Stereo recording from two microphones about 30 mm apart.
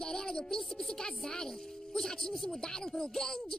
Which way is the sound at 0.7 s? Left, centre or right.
Left.